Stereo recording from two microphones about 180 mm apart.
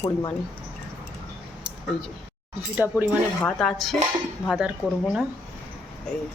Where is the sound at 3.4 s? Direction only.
5° left (ahead or behind).